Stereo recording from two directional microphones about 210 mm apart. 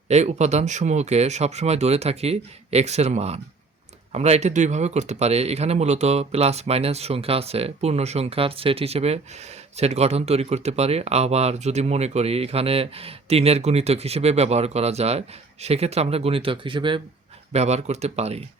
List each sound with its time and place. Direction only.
0.1 s speech: 30° right (ahead or behind)